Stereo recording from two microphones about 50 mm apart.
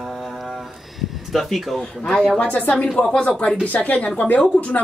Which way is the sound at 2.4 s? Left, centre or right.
Left.